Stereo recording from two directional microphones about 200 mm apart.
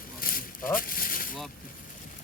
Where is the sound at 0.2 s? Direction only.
45° left (ahead or behind).